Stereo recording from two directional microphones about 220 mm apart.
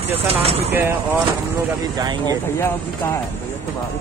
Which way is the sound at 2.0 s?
15° right (ahead or behind).